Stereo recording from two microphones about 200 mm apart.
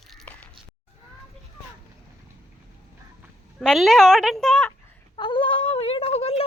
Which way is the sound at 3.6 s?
Centre (ahead or behind).